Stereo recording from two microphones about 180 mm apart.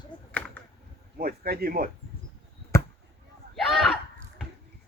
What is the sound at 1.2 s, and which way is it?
Speech, 55° right (ahead or behind).